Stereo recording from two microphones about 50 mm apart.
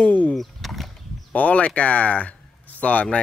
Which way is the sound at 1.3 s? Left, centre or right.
Left.